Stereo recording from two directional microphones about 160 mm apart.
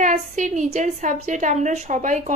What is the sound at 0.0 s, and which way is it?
A woman's voice, 50° right (ahead or behind).